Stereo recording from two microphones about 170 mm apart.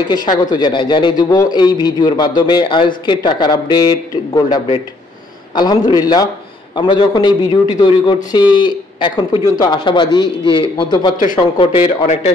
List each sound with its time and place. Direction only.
0.1 s a man's voice: 25° left (ahead or behind)